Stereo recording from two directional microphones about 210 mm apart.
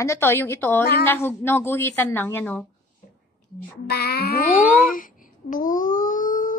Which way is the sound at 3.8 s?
50° left (ahead or behind).